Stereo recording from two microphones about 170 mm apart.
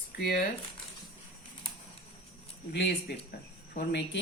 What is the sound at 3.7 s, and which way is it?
Speech, 90° left.